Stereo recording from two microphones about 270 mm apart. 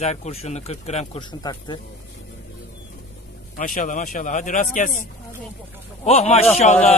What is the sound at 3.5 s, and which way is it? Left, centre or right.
Speech, left.